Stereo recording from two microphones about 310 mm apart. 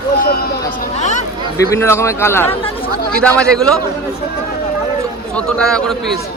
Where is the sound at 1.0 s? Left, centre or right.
Left.